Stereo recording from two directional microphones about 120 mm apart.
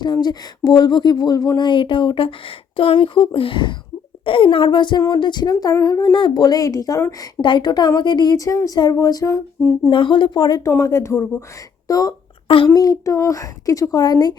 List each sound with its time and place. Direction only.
0.0 s speech: 35° left (ahead or behind)
6.1 s speech: 45° left (ahead or behind)
6.4 s a woman's voice: 30° left (ahead or behind)
7.4 s speech: 40° left (ahead or behind)
9.9 s speech: 45° left (ahead or behind)
10.7 s a woman's voice: 20° left (ahead or behind)